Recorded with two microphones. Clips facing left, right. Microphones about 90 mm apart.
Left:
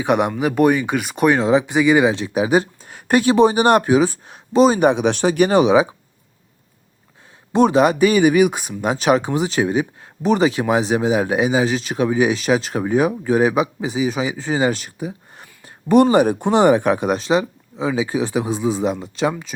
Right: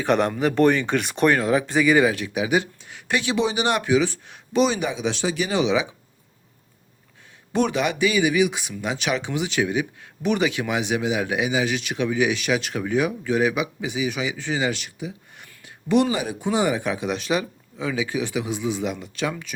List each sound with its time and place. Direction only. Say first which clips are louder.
0.0 s speech: left 2 dB; 15° left (ahead or behind)
1.3 s speech: left 6 dB; 20° left (ahead or behind); by 4.8 s 40° left (ahead or behind)
4.8 s speech: left 9 dB; 60° left (ahead or behind)
7.5 s speech: left 8 dB; 35° left (ahead or behind); by 17.2 s 50° left (ahead or behind)
17.2 s speech: left 6 dB; 30° left (ahead or behind)